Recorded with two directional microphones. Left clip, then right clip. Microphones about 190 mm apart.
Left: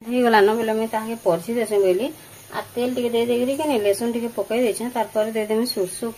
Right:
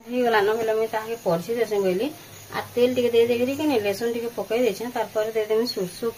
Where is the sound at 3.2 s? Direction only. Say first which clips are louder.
Left 2 dB; 35° left (ahead or behind).